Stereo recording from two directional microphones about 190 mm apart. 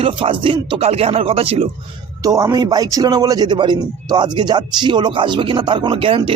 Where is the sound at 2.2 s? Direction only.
20° right (ahead or behind).